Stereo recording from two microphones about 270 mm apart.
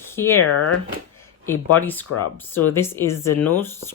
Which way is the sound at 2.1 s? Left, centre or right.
Left.